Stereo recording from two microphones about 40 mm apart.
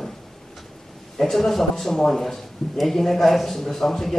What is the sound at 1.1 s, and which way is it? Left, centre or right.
A man's voice, centre.